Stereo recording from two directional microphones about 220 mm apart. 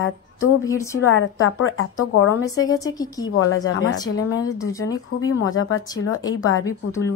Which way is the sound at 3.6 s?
65° left (ahead or behind).